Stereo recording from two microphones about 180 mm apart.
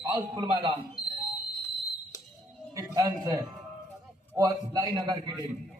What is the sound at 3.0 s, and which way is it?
A man's voice, 20° right (ahead or behind).